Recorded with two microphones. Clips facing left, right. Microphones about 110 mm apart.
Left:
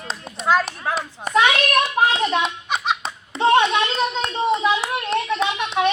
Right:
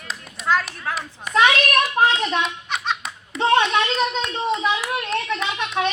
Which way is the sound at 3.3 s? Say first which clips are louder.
Left 3 dB; 30° left (ahead or behind).